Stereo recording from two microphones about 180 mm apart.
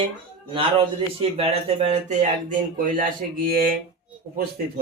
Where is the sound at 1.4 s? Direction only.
35° right (ahead or behind).